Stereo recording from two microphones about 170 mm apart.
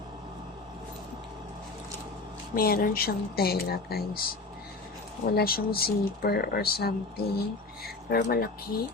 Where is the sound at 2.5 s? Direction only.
60° left (ahead or behind).